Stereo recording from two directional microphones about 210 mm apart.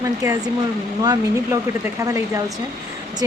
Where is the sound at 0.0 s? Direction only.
15° right (ahead or behind).